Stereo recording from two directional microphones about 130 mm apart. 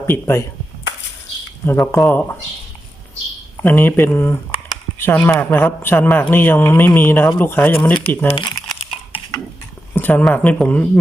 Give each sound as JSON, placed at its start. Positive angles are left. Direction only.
{"t": 0.1, "sound": "speech", "side_deg": 20}
{"t": 1.6, "sound": "speech", "side_deg": 20}
{"t": 3.6, "sound": "speech", "side_deg": 15}
{"t": 8.3, "sound": "crumpling", "side_deg": 35}
{"t": 9.9, "sound": "speech", "side_deg": 15}